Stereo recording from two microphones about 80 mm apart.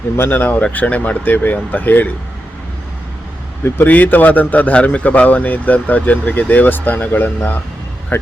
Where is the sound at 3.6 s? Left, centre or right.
Left.